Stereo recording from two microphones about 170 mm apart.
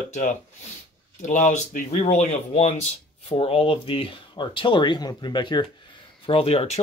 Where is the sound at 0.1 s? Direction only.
45° left (ahead or behind).